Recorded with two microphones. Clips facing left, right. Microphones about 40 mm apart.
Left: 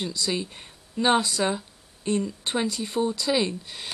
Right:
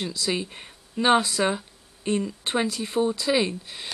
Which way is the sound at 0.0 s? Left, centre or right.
Centre.